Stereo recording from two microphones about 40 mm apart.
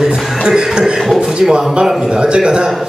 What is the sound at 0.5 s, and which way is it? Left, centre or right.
Speech, right.